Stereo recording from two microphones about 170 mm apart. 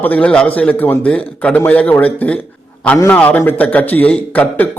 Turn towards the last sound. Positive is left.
turn(degrees=10)  # may be behind; listen again after turning